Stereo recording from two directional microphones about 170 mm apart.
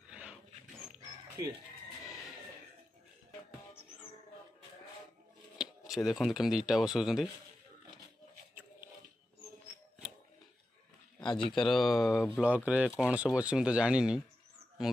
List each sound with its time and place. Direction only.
0.1 s mouse: 5° right (ahead or behind)
5.6 s speech: centre (ahead or behind)
11.1 s speech: 25° left (ahead or behind)
11.5 s speech: centre (ahead or behind)